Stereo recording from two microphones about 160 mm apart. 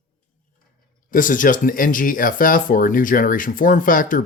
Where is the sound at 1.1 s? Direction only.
55° left (ahead or behind).